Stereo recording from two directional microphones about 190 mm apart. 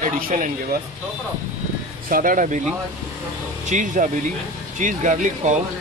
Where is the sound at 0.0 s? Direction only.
45° right (ahead or behind).